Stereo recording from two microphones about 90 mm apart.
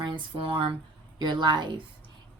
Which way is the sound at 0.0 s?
65° right (ahead or behind).